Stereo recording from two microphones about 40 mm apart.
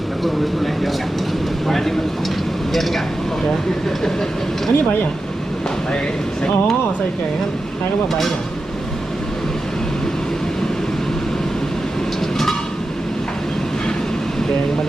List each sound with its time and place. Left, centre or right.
0.3 s speech: centre
3.8 s speech: centre